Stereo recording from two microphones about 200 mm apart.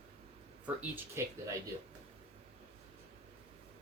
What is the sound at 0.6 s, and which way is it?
Speech, 10° right (ahead or behind).